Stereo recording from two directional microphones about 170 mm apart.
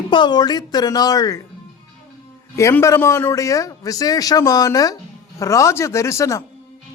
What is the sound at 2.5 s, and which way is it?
Speech, 15° left (ahead or behind).